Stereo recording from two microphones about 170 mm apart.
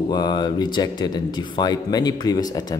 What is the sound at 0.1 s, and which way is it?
Speech, 25° left (ahead or behind).